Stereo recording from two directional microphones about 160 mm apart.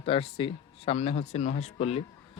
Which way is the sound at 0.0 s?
35° left (ahead or behind).